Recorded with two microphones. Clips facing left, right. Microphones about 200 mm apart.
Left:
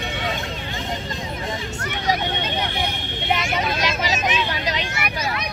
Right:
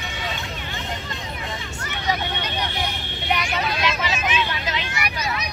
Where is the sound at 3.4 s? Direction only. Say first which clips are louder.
Left 1 dB; 45° left (ahead or behind).